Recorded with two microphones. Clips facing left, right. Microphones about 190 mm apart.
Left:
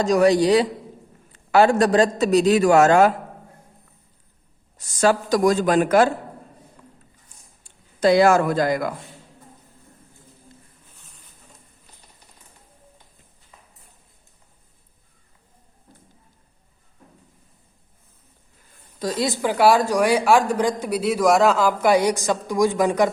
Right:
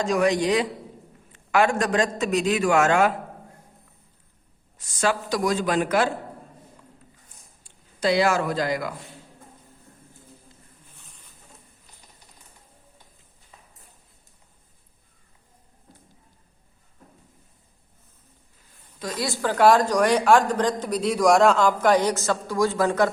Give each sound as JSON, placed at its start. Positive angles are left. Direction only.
{"t": 0.0, "sound": "a man's voice", "side_deg": 35}
{"t": 4.8, "sound": "a man's voice", "side_deg": 40}
{"t": 7.6, "sound": "speech", "side_deg": 50}
{"t": 18.9, "sound": "a woman's voice", "side_deg": 35}
{"t": 19.2, "sound": "a woman's voice", "side_deg": 15}